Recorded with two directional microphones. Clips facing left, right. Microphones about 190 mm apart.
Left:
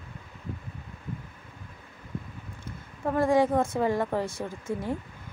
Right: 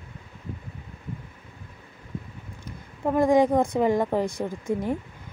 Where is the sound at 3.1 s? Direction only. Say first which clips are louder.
Right 3 dB; 15° right (ahead or behind).